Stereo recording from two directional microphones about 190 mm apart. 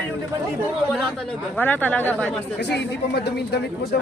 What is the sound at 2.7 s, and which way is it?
Speech, 60° left (ahead or behind).